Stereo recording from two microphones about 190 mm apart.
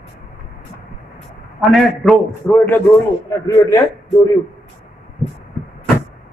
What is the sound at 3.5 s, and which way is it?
Speech, 20° left (ahead or behind).